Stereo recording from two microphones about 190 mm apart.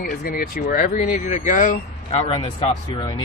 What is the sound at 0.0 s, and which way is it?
Speech, 55° left (ahead or behind).